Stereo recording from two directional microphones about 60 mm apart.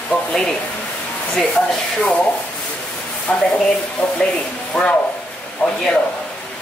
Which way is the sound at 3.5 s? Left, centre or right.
Centre.